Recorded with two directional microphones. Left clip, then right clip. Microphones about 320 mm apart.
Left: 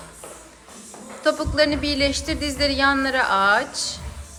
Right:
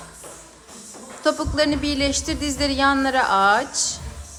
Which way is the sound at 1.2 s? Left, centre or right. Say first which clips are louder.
Left 1 dB; centre.